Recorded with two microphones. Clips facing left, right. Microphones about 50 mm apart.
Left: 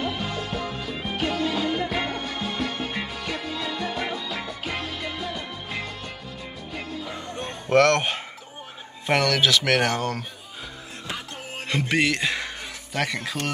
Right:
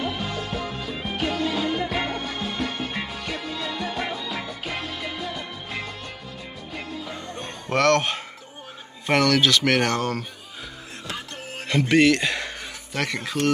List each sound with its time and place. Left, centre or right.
0.0 s music: centre
7.3 s music: left
7.9 s speech: centre
11.6 s a sound: centre